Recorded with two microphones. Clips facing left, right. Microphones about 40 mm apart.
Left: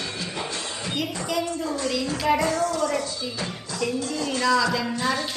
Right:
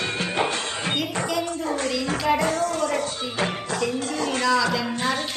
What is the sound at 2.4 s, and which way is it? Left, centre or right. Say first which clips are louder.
Music: even; right.